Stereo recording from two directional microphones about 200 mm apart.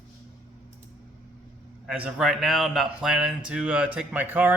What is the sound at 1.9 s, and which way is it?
Speech, 5° right (ahead or behind).